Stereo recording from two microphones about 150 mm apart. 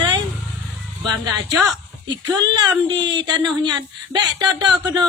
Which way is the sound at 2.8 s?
30° right (ahead or behind).